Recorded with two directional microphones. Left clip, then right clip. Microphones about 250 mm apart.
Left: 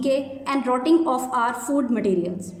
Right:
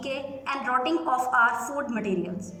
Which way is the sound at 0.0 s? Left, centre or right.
Centre.